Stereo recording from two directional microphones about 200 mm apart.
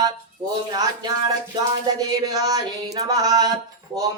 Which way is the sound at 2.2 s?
20° right (ahead or behind).